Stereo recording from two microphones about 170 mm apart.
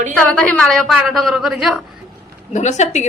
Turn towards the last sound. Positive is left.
turn(degrees=45)  # may be behind; listen again after turning